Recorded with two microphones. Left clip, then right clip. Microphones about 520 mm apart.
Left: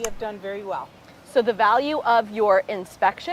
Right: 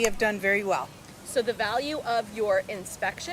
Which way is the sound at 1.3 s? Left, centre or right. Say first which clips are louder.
Left 8 dB; left.